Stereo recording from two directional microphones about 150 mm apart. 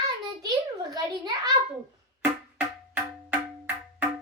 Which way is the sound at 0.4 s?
25° right (ahead or behind).